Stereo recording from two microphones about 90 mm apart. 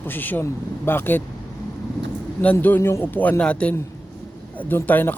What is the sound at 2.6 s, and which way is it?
Speech, 25° left (ahead or behind).